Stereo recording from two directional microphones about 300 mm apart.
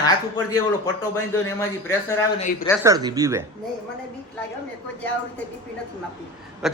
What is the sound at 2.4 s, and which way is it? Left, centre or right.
Speech, left.